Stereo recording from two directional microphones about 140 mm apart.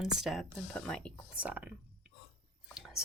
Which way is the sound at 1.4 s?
10° right (ahead or behind).